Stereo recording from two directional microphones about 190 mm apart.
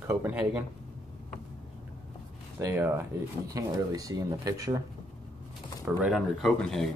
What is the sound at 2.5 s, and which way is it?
Speech, 15° right (ahead or behind).